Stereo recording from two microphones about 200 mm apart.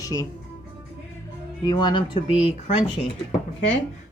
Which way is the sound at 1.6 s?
20° left (ahead or behind).